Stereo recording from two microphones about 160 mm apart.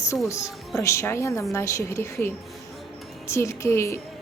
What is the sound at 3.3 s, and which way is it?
Speech, 15° left (ahead or behind).